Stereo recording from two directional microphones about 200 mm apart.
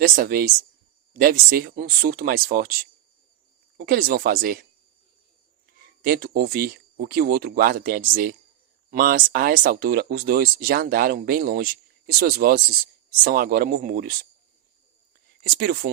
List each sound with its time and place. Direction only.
0.0 s speech: 45° right (ahead or behind)
3.8 s speech: 45° right (ahead or behind)
6.0 s speech: 50° right (ahead or behind)
15.4 s speech: 50° right (ahead or behind)